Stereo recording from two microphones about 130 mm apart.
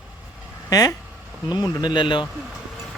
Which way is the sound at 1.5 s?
10° right (ahead or behind).